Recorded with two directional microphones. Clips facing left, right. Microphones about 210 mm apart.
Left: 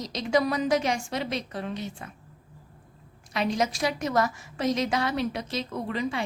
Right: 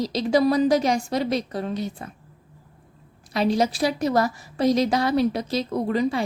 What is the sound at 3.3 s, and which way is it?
A woman's voice, 35° right (ahead or behind).